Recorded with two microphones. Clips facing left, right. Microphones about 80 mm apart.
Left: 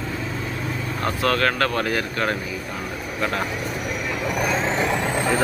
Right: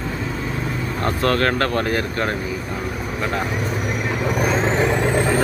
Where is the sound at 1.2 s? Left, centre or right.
Right.